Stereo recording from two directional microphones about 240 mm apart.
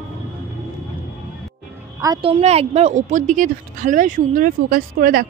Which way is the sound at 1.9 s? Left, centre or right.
Centre.